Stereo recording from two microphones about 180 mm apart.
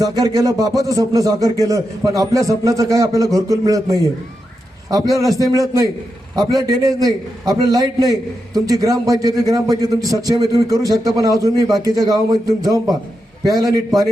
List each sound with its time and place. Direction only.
0.0 s a man's voice: 20° right (ahead or behind)